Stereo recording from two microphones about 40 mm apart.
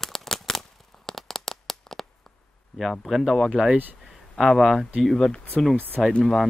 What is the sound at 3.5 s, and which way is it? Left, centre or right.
Speech, centre.